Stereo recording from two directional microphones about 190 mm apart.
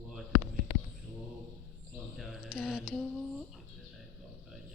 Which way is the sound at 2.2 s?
Centre (ahead or behind).